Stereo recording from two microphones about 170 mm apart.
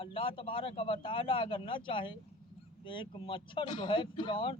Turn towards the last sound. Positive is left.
turn(degrees=30)  # may be behind; listen again after turning